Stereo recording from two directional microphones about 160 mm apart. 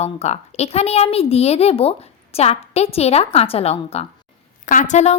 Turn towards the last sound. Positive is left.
turn(degrees=45)  # may be behind; listen again after turning